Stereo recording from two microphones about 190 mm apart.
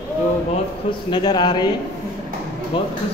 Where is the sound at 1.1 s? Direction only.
25° left (ahead or behind).